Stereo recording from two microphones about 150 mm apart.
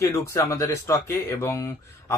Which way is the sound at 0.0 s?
20° left (ahead or behind).